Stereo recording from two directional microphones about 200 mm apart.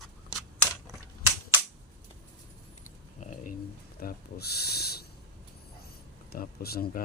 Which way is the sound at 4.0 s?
50° left (ahead or behind).